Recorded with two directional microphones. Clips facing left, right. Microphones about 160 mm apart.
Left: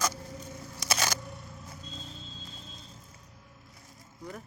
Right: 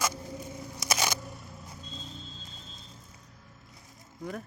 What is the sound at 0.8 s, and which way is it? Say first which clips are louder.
Single-lens reflex camera: right 1 dB; 15° right (ahead or behind).